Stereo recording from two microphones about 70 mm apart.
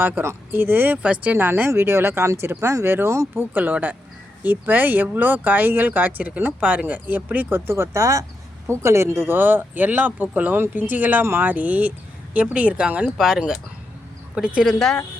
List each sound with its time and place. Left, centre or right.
0.0 s speech: right
3.5 s speech: right
7.7 s speech: right; by 13.1 s centre
13.1 s speech: centre